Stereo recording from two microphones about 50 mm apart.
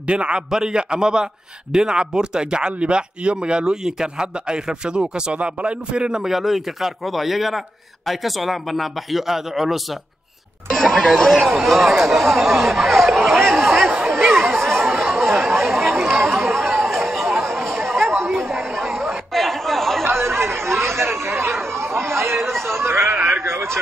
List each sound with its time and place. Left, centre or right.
0.0 s a man's voice: right
6.2 s a man's voice: centre
14.2 s chatter: centre
20.0 s chatter: right
22.7 s a sound: right